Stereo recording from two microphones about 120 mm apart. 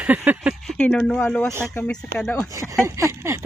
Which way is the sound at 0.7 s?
5° left (ahead or behind).